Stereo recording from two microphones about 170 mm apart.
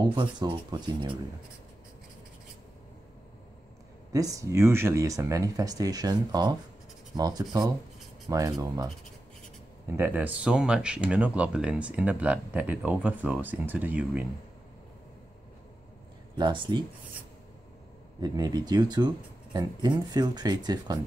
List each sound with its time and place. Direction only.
0.0 s speech: 25° right (ahead or behind)
4.1 s speech: 20° right (ahead or behind)
9.9 s speech: 10° right (ahead or behind)
16.3 s speech: 25° right (ahead or behind)
18.2 s speech: 25° right (ahead or behind)